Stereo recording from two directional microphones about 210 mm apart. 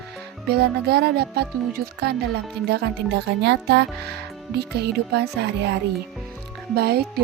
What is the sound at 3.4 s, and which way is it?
Speech, 55° right (ahead or behind).